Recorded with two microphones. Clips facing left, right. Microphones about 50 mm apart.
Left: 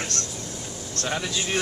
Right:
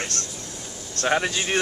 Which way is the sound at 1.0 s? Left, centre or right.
Right.